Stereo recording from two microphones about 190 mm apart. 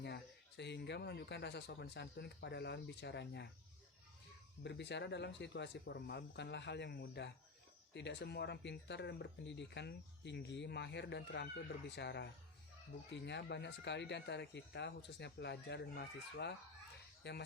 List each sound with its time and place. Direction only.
0.0 s speech: 65° left (ahead or behind)
4.6 s speech: 65° left (ahead or behind)